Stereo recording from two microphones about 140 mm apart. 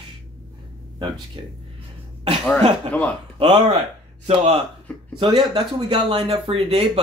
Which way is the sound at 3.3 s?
35° right (ahead or behind).